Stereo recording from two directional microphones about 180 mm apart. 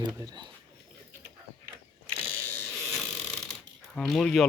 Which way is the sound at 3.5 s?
Centre (ahead or behind).